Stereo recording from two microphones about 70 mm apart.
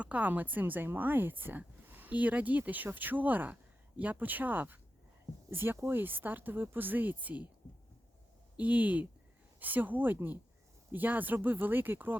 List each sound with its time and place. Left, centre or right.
0.0 s a woman's voice: right
8.5 s a woman's voice: right